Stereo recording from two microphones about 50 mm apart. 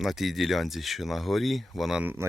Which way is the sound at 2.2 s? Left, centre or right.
Right.